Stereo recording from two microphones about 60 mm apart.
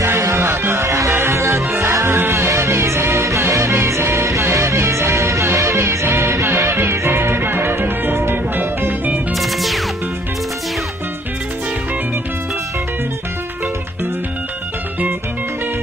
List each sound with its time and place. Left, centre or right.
0.0 s music: right
9.3 s music: centre